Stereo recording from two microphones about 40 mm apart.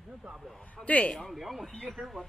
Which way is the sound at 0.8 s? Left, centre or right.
Centre.